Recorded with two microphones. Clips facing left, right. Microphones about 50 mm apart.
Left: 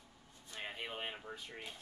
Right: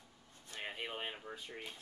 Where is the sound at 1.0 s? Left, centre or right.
Centre.